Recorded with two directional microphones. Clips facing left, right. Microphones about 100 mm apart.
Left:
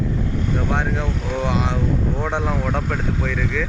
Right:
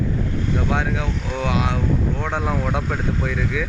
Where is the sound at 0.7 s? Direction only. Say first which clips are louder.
Even; 5° right (ahead or behind).